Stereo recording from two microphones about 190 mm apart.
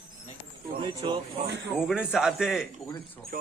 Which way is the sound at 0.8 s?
25° right (ahead or behind).